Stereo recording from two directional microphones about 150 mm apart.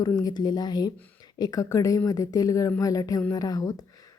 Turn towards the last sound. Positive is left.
turn(degrees=25)  # may be behind; listen again after turning